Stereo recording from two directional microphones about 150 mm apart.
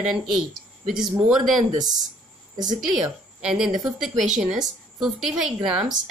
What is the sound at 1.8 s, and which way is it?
A woman's voice, 25° right (ahead or behind).